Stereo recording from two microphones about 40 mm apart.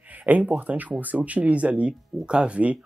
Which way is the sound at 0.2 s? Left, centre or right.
Right.